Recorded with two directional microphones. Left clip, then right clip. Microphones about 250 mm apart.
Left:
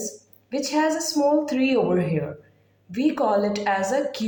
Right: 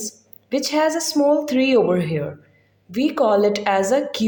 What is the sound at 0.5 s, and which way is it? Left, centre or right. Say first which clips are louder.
A woman's voice: right 4 dB; right.